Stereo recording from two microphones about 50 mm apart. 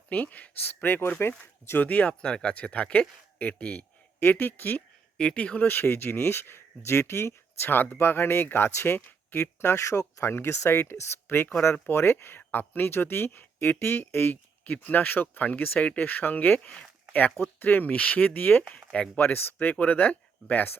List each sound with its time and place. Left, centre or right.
0.1 s speech: left
1.8 s speech: left
4.2 s speech: left
5.1 s speech: centre
5.5 s speech: left
9.7 s speech: left
10.3 s speech: left
14.6 s speech: left